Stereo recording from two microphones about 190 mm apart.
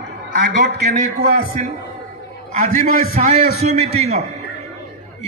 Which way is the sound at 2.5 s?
40° right (ahead or behind).